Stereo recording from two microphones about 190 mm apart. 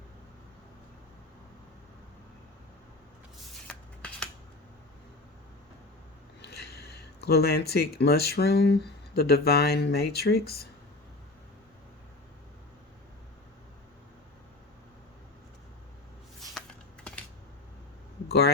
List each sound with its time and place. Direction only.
3.7 s shuffling cards: 5° left (ahead or behind)
6.4 s speech: 60° left (ahead or behind)
16.4 s shuffling cards: 5° left (ahead or behind)
18.3 s speech: 60° left (ahead or behind)